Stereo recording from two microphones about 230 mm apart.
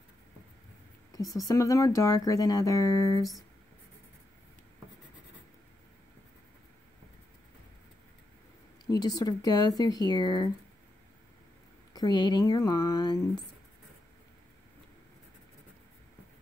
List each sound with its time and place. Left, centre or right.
1.1 s speech: centre
8.8 s speech: centre
11.9 s speech: centre